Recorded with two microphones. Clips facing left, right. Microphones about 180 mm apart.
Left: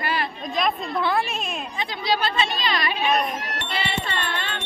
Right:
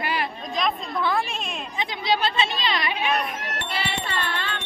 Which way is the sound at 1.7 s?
20° right (ahead or behind).